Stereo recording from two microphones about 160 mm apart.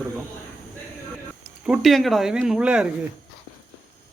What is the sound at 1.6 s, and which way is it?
Speech, centre (ahead or behind).